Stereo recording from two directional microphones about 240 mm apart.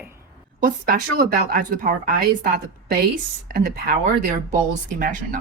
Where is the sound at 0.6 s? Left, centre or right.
Right.